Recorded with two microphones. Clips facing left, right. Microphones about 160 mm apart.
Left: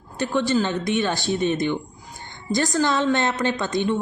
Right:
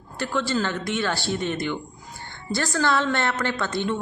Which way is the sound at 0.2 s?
15° left (ahead or behind).